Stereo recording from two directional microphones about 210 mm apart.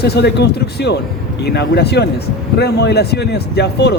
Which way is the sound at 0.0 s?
50° left (ahead or behind).